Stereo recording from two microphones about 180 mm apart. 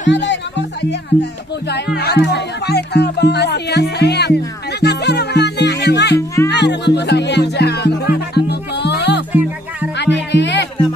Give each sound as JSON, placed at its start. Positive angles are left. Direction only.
{"t": 0.1, "sound": "speech", "side_deg": 75}
{"t": 2.0, "sound": "speech", "side_deg": 65}
{"t": 6.1, "sound": "music", "side_deg": 15}
{"t": 6.5, "sound": "speech", "side_deg": 70}
{"t": 8.4, "sound": "music", "side_deg": 70}
{"t": 9.3, "sound": "music", "side_deg": -10}
{"t": 9.9, "sound": "music", "side_deg": 75}